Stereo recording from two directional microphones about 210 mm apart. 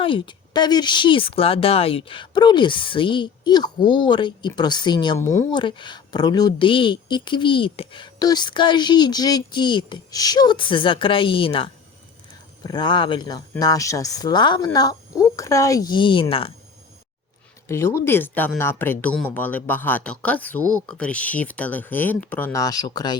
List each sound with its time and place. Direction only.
0.0 s speech: 25° left (ahead or behind)
17.7 s speech: 10° left (ahead or behind)